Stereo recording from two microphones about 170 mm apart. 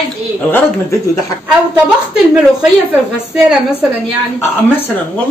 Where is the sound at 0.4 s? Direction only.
10° left (ahead or behind).